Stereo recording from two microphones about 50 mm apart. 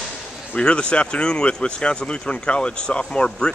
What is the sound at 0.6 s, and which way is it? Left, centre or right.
Speech, centre.